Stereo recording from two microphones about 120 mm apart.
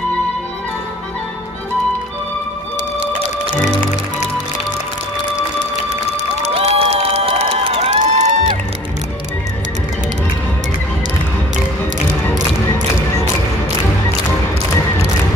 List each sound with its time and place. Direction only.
6.4 s crowd: 55° right (ahead or behind)